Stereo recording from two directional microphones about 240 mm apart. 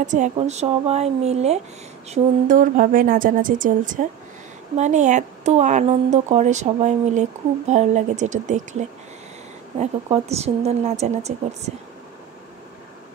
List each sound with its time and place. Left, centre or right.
0.0 s a woman's voice: right